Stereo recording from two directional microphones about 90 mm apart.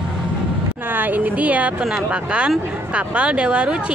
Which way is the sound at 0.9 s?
20° right (ahead or behind).